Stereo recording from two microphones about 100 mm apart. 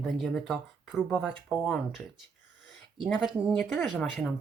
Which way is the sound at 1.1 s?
15° left (ahead or behind).